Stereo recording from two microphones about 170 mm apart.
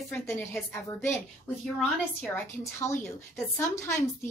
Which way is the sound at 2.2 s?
10° left (ahead or behind).